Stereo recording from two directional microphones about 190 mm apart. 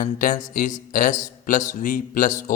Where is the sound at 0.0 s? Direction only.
45° left (ahead or behind).